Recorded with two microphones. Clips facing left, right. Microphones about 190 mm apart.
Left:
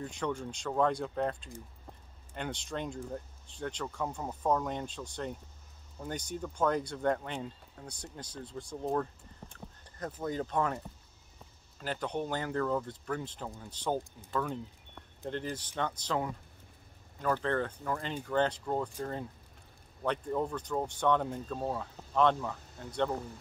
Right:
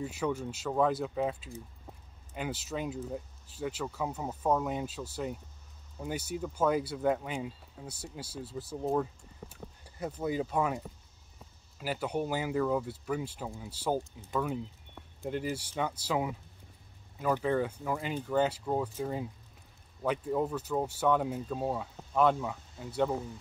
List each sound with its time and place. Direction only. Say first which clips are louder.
0.0 s speech: right 2 dB; 5° right (ahead or behind)
11.8 s speech: right 2 dB; 10° right (ahead or behind)